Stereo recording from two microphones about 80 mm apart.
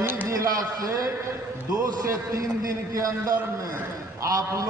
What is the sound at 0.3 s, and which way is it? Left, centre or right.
A man's voice, right.